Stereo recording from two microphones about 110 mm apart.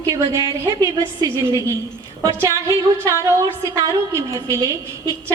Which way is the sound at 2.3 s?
25° right (ahead or behind).